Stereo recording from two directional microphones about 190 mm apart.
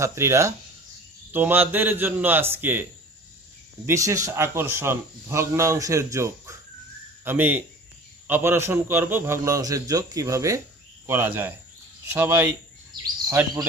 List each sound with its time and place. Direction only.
0.0 s a man's voice: 15° right (ahead or behind)
3.8 s a man's voice: 15° right (ahead or behind)